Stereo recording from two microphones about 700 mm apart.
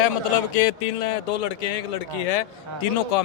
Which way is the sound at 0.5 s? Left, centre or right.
Left.